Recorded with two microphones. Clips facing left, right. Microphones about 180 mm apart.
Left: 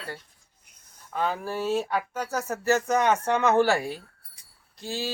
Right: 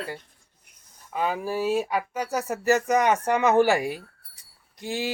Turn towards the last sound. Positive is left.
turn(degrees=-15)  # may be behind; listen again after turning